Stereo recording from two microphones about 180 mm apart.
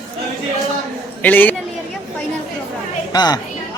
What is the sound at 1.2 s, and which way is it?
Speech, 10° left (ahead or behind).